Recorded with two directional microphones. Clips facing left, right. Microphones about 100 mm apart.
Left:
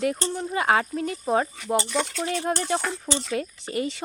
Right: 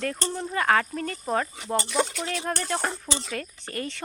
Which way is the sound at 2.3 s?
20° left (ahead or behind).